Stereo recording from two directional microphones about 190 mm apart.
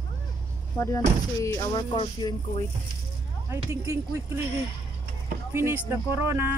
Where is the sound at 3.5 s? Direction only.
15° right (ahead or behind).